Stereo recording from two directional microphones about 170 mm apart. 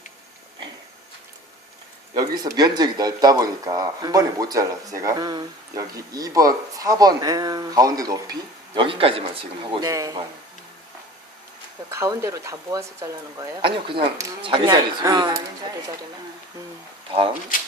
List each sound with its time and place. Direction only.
2.1 s speech: 25° right (ahead or behind)
9.9 s speech: 20° right (ahead or behind)
11.9 s speech: 15° right (ahead or behind)
13.6 s speech: 30° right (ahead or behind)